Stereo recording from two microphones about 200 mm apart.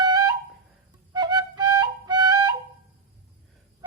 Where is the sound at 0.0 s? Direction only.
20° right (ahead or behind).